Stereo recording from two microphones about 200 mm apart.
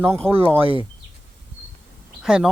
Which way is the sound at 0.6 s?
25° right (ahead or behind).